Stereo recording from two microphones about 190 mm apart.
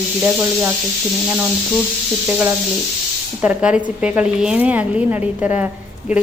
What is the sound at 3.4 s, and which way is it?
A woman's voice, 5° right (ahead or behind).